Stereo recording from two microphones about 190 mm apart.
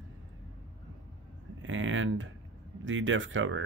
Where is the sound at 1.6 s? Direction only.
90° right.